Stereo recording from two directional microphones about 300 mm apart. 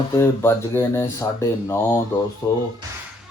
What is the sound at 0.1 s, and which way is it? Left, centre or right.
Speech, centre.